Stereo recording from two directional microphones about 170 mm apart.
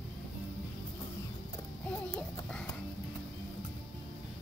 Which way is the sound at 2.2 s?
5° left (ahead or behind).